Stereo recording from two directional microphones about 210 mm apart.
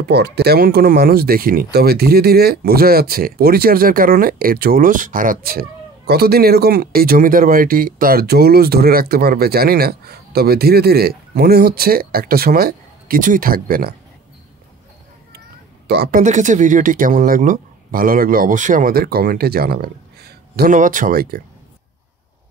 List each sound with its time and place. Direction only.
0.0 s speech: 50° right (ahead or behind)
15.9 s speech: 50° right (ahead or behind)
16.2 s speech: 35° right (ahead or behind)